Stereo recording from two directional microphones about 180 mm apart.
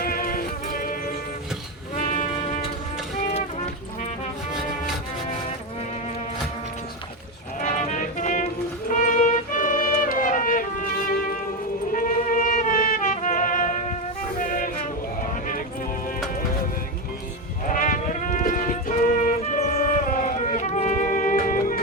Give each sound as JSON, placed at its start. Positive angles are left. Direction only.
{"t": 0.0, "sound": "music", "side_deg": 55}
{"t": 2.0, "sound": "music", "side_deg": 40}
{"t": 7.6, "sound": "music", "side_deg": 40}
{"t": 11.9, "sound": "music", "side_deg": 45}
{"t": 17.7, "sound": "music", "side_deg": 45}